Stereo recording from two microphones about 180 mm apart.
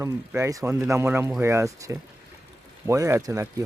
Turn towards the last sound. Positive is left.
turn(degrees=-20)  # may be behind; listen again after turning